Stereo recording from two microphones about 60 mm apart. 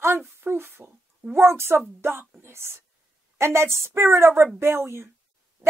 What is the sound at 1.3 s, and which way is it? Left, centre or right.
A woman's voice, right.